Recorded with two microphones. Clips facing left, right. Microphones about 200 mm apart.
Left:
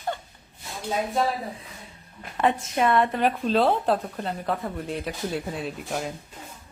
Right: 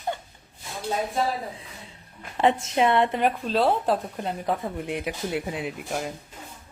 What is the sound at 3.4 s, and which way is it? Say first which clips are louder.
Speech: left 1 dB; 5° right (ahead or behind).